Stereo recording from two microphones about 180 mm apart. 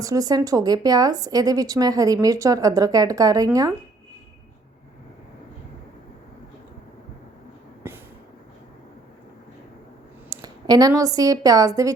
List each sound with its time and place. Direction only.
0.0 s a woman's voice: 20° right (ahead or behind)
7.9 s a sound: 10° right (ahead or behind)
10.2 s a woman's voice: 20° right (ahead or behind)